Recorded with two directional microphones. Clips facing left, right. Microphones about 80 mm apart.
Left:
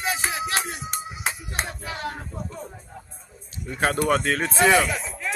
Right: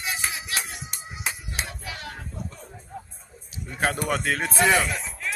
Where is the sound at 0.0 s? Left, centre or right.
Left.